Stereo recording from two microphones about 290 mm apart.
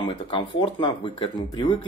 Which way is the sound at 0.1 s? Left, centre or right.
Centre.